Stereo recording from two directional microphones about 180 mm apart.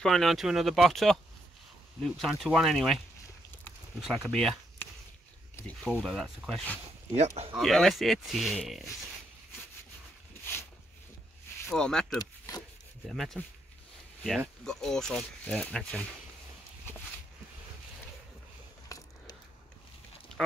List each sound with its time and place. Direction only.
0.0 s speech: centre (ahead or behind)
4.0 s speech: centre (ahead or behind)
5.9 s speech: centre (ahead or behind)
7.1 s speech: 35° right (ahead or behind)
7.5 s speech: centre (ahead or behind)
11.7 s speech: 5° left (ahead or behind)
12.2 s speech: 20° left (ahead or behind)
13.0 s speech: centre (ahead or behind)
14.6 s speech: 5° left (ahead or behind)
18.9 s biting: 20° left (ahead or behind)